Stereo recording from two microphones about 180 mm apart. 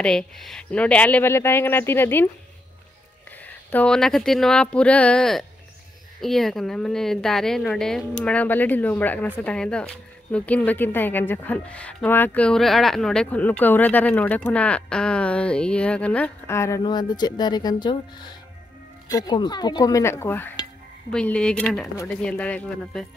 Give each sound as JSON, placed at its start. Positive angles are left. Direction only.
{"t": 0.0, "sound": "speech", "side_deg": 5}
{"t": 3.3, "sound": "a woman's voice", "side_deg": 10}
{"t": 19.0, "sound": "a sound", "side_deg": 20}
{"t": 21.1, "sound": "a woman's voice", "side_deg": 5}